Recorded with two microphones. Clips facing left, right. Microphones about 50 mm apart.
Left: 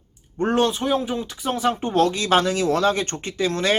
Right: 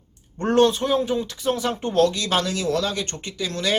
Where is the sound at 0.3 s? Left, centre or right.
Centre.